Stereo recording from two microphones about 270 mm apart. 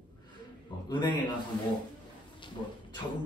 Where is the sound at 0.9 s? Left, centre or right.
Centre.